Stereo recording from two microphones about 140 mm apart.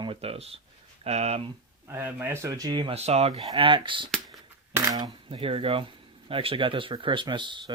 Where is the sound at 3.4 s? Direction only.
35° right (ahead or behind).